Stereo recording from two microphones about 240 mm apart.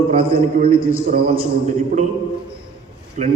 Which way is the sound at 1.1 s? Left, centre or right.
Right.